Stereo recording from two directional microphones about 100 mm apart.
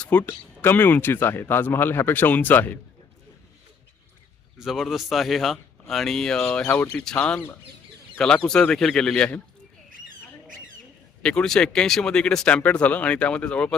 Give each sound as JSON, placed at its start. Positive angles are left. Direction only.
{"t": 0.0, "sound": "speech", "side_deg": 15}
{"t": 4.5, "sound": "speech", "side_deg": -5}
{"t": 11.2, "sound": "speech", "side_deg": 10}